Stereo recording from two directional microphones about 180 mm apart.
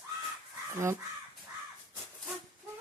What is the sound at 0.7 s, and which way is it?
Speech, 15° right (ahead or behind).